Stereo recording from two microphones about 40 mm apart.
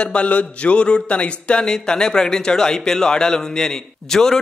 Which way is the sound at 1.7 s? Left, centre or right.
Centre.